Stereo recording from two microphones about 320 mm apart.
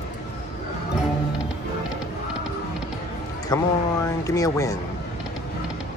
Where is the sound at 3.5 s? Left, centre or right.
Centre.